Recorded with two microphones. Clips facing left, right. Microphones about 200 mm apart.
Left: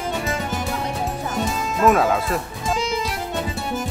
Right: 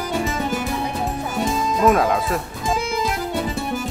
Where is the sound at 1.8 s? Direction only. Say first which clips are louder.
Left 1 dB; centre (ahead or behind).